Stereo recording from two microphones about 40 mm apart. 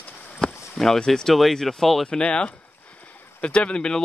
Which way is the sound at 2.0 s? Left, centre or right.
Left.